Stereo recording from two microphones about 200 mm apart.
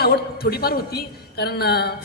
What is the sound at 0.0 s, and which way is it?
A woman's voice, 50° left (ahead or behind).